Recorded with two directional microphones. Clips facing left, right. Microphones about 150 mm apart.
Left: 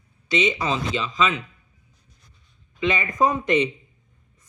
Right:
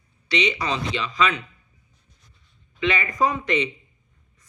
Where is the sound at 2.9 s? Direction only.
15° left (ahead or behind).